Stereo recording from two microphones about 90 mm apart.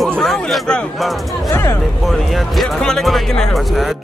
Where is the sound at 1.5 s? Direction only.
30° left (ahead or behind).